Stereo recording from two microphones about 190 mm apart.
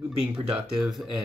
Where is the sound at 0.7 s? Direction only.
Centre (ahead or behind).